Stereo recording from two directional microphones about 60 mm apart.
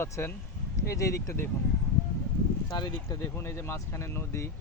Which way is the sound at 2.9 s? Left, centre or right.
Left.